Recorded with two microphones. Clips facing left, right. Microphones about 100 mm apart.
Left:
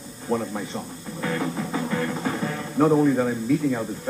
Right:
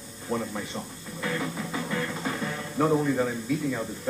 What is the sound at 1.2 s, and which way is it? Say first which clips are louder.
Music: left 4 dB; 20° left (ahead or behind).